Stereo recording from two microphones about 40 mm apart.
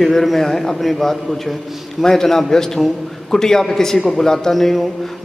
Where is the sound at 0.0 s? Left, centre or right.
Centre.